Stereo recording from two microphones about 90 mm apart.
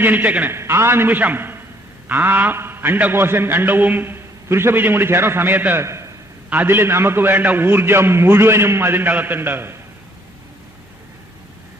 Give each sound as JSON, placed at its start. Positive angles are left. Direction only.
{"t": 0.0, "sound": "a man's voice", "side_deg": -20}
{"t": 0.5, "sound": "a man's voice", "side_deg": -30}
{"t": 5.8, "sound": "a man's voice", "side_deg": -30}
{"t": 6.5, "sound": "a man's voice", "side_deg": -20}